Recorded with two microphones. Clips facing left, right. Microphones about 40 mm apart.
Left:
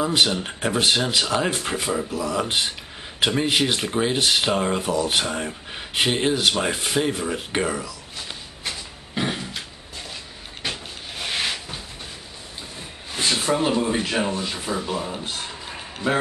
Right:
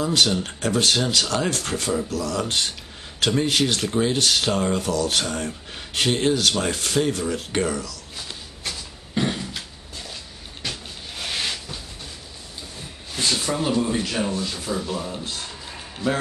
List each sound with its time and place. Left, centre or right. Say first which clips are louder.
0.0 s speech: even; centre
10.6 s cupboard open or close: left 2 dB; centre
13.1 s speech: left 2 dB; centre